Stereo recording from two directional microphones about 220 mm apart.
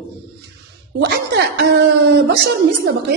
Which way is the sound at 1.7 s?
50° right (ahead or behind).